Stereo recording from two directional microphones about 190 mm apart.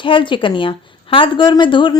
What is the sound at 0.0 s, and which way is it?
Speech, 25° left (ahead or behind).